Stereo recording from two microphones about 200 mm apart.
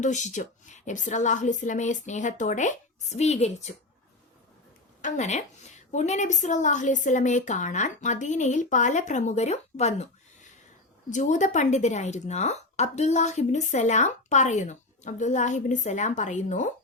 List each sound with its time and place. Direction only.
0.0 s a woman's voice: 35° left (ahead or behind)
5.0 s a woman's voice: 35° left (ahead or behind)